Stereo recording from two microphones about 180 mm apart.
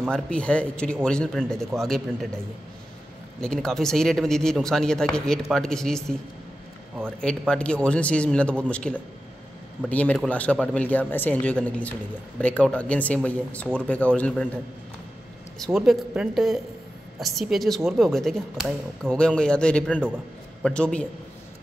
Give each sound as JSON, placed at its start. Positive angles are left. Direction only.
{"t": 0.1, "sound": "speech", "side_deg": 5}
{"t": 15.6, "sound": "speech", "side_deg": 0}